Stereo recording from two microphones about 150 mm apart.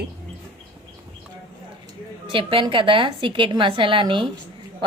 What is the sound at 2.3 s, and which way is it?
A woman's voice, 35° right (ahead or behind).